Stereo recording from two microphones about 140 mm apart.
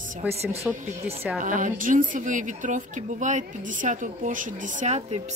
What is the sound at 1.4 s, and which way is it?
A woman's voice, 70° right (ahead or behind).